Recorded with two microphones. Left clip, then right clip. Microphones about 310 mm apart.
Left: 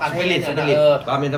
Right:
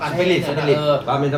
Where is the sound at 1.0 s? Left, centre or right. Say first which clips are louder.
Right 1 dB; centre.